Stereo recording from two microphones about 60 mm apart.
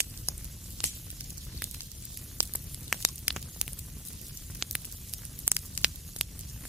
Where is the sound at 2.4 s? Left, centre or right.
Right.